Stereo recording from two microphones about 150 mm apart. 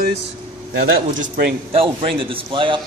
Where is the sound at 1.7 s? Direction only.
35° right (ahead or behind).